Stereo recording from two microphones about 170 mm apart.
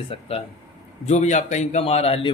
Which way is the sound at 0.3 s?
35° left (ahead or behind).